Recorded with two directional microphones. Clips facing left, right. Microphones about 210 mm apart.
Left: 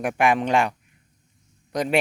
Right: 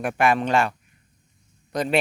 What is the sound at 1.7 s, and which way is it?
Speech, 10° left (ahead or behind).